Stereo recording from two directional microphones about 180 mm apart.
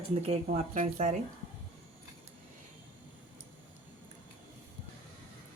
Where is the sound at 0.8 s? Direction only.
50° right (ahead or behind).